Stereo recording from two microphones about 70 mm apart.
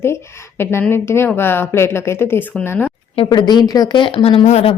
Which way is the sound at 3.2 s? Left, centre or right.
Left.